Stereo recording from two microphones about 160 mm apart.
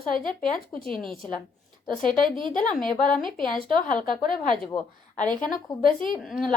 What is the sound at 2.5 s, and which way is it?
Speech, 55° left (ahead or behind).